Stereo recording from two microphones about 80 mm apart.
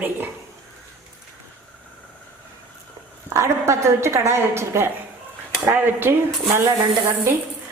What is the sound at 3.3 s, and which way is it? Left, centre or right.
A woman's voice, right.